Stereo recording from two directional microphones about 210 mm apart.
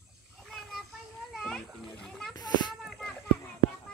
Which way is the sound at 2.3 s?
20° left (ahead or behind).